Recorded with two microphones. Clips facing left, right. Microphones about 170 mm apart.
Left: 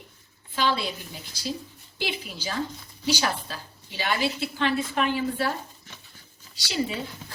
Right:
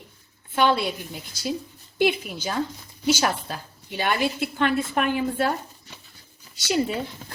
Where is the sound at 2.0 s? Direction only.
55° right (ahead or behind).